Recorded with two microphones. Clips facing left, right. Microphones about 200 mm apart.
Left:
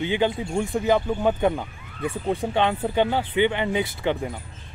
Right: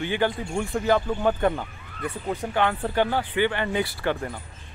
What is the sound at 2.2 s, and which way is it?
Speech, 25° left (ahead or behind).